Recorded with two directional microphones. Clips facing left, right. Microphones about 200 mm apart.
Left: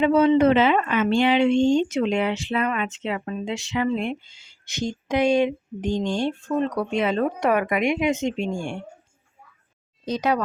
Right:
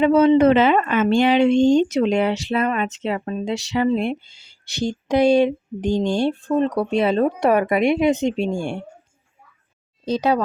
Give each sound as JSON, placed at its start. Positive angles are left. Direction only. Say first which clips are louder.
{"t": 0.0, "sound": "speech", "louder": "right 3 dB", "side_deg": -40}
{"t": 10.1, "sound": "speech", "louder": "right 4 dB", "side_deg": -30}